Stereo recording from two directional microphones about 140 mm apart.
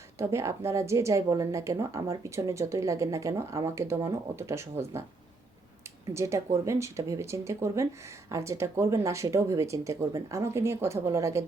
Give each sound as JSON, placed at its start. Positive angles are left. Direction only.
{"t": 0.2, "sound": "speech", "side_deg": -20}
{"t": 6.1, "sound": "speech", "side_deg": -20}